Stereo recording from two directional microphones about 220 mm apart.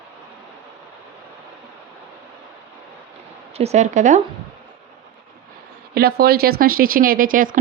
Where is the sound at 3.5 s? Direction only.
30° right (ahead or behind).